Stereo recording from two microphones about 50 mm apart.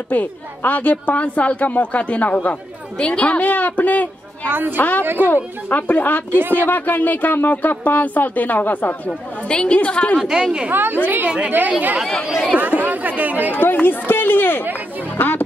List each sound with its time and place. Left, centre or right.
0.1 s speech: left
4.5 s a woman's voice: right
4.7 s speech: left
5.0 s a woman's voice: right
5.3 s speech: left
6.3 s speech: right
6.6 s speech: left
9.5 s a woman's voice: centre
10.1 s speech: centre
10.7 s a woman's voice: right
11.2 s a woman's voice: right
12.5 s speech: right
13.6 s speech: left